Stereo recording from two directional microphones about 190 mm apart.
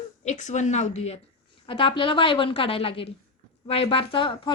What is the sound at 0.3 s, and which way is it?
A woman's voice, 40° left (ahead or behind).